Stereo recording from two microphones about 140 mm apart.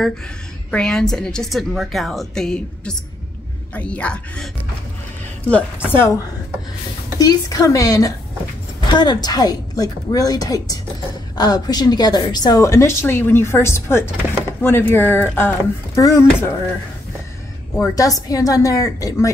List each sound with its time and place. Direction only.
0.7 s a woman's voice: 5° left (ahead or behind)
5.9 s a woman's voice: 20° left (ahead or behind)
17.7 s a woman's voice: 25° left (ahead or behind)